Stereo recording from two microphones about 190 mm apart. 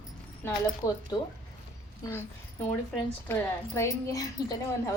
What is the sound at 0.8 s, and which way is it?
Speech, 15° left (ahead or behind).